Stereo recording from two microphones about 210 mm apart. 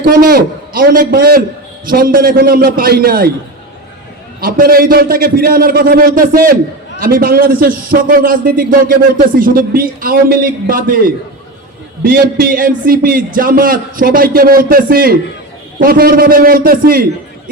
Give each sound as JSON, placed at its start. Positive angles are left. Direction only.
{"t": 0.0, "sound": "a man's voice", "side_deg": -45}
{"t": 4.4, "sound": "a man's voice", "side_deg": -45}
{"t": 12.0, "sound": "a man's voice", "side_deg": -45}